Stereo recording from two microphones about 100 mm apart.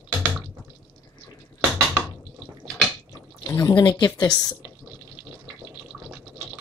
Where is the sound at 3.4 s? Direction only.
35° left (ahead or behind).